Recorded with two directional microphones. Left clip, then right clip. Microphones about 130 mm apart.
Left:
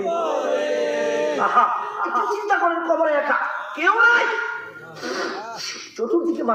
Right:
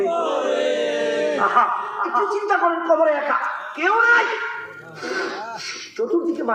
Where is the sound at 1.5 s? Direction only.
35° left (ahead or behind).